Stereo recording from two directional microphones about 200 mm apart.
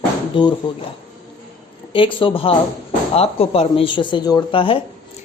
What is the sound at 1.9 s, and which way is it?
Speech, 25° left (ahead or behind).